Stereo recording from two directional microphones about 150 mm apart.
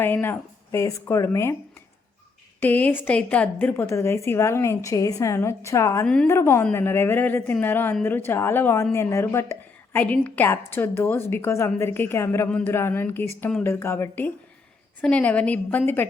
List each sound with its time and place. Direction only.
0.0 s a woman's voice: 15° left (ahead or behind)
2.6 s a woman's voice: 10° left (ahead or behind)